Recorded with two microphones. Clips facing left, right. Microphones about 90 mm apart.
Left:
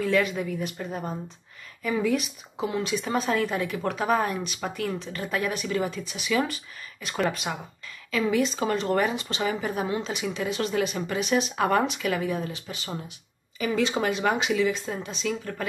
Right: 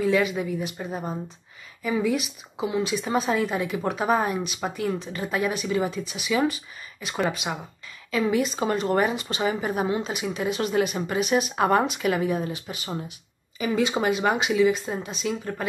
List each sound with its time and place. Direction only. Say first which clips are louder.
0.0 s a woman's voice: right 2 dB; 10° right (ahead or behind)
11.5 s a woman's voice: right 2 dB; 25° right (ahead or behind)